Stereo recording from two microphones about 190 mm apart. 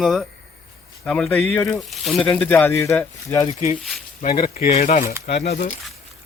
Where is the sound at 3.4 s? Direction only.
35° left (ahead or behind).